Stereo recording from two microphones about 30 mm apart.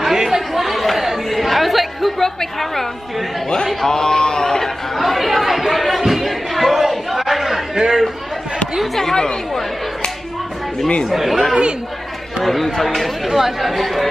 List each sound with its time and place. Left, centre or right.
0.0 s chatter: centre
2.2 s a woman's voice: centre
4.9 s chatter: centre
7.7 s chatter: centre
9.1 s speech: left
11.1 s speech: centre
12.4 s speech: centre